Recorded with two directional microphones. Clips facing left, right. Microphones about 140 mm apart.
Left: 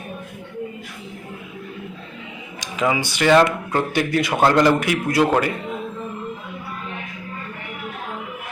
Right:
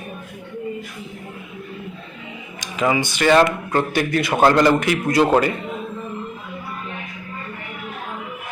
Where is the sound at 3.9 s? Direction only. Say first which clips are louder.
Even; 15° left (ahead or behind).